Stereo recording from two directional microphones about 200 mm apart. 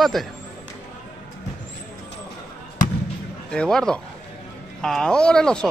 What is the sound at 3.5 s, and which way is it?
Speech, 5° left (ahead or behind).